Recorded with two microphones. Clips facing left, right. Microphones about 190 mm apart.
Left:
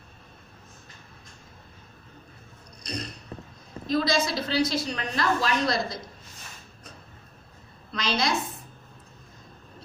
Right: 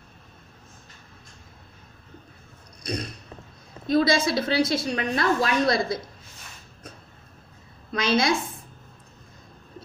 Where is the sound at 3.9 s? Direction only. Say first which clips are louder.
Right 4 dB; 60° right (ahead or behind).